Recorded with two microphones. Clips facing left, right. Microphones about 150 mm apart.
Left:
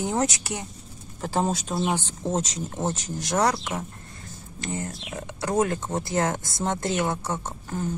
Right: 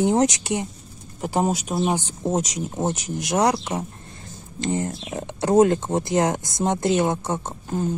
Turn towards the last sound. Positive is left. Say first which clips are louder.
# right 4 dB
turn(degrees=-20)  # may be behind; listen again after turning